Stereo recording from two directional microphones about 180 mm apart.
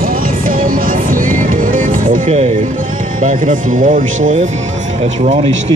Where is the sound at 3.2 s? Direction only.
45° right (ahead or behind).